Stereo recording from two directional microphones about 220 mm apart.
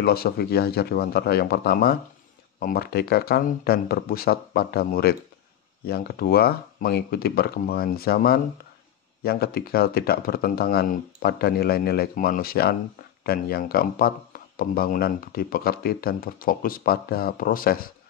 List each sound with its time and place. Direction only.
0.0 s speech: 45° left (ahead or behind)